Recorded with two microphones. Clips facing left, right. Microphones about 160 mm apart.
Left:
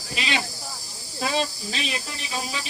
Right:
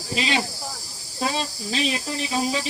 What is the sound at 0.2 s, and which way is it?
Speech, 40° right (ahead or behind).